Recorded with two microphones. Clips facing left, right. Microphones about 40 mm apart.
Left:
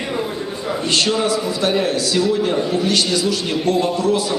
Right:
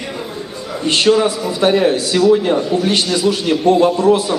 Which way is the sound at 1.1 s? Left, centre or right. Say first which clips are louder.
Right 12 dB; right.